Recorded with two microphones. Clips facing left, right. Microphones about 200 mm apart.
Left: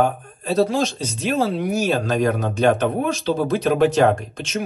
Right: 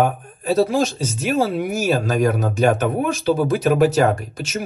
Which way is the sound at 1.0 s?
5° right (ahead or behind).